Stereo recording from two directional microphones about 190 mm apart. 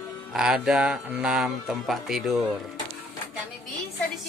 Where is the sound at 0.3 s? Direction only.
5° right (ahead or behind).